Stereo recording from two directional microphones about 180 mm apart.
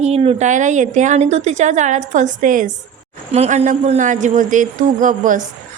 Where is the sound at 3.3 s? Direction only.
35° right (ahead or behind).